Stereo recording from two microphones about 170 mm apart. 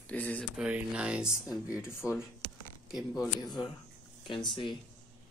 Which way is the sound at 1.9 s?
15° left (ahead or behind).